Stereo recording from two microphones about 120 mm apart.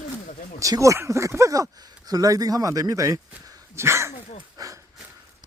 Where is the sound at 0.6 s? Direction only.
30° right (ahead or behind).